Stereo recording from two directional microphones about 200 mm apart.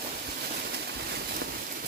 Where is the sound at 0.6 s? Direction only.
55° right (ahead or behind).